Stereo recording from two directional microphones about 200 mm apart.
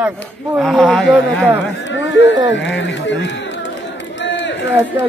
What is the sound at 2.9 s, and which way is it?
Speech, 65° left (ahead or behind).